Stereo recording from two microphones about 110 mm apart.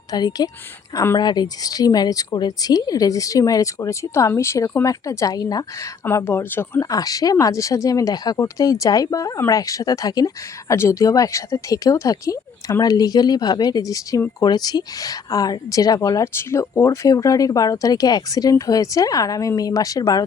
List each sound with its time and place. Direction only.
0.1 s a woman's voice: 40° left (ahead or behind)
6.1 s speech: 20° left (ahead or behind)
6.9 s a woman's voice: 35° left (ahead or behind)